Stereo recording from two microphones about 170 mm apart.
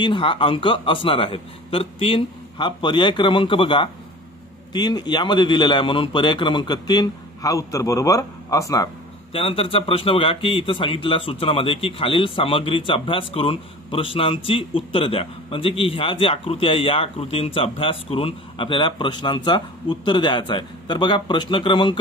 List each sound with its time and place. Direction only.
0.0 s a man's voice: 30° left (ahead or behind)
9.3 s a man's voice: 35° left (ahead or behind)